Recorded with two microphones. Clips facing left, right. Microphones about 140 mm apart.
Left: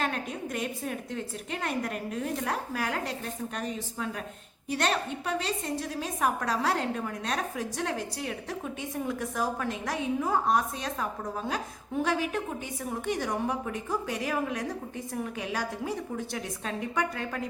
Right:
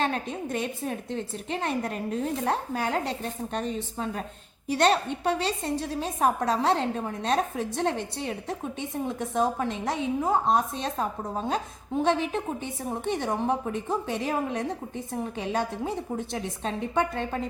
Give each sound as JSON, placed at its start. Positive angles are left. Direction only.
{"t": 0.0, "sound": "a woman's voice", "side_deg": -30}